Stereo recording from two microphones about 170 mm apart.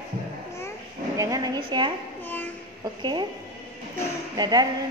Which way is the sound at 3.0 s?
25° right (ahead or behind).